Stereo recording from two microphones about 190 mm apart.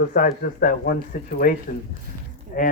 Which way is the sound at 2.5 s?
45° left (ahead or behind).